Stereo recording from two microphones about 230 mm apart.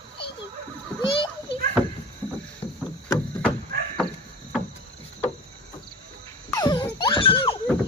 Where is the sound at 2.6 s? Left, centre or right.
Left.